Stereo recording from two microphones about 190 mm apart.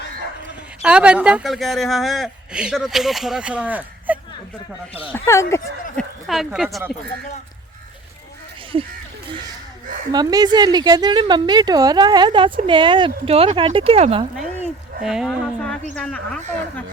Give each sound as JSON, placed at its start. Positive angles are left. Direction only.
{"t": 0.8, "sound": "speech", "side_deg": -5}
{"t": 5.1, "sound": "speech", "side_deg": 15}
{"t": 6.0, "sound": "speech", "side_deg": 0}
{"t": 10.1, "sound": "a woman's voice", "side_deg": -20}
{"t": 15.0, "sound": "speech", "side_deg": -5}